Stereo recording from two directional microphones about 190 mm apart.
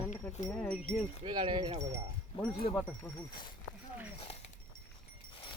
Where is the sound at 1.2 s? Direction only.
25° right (ahead or behind).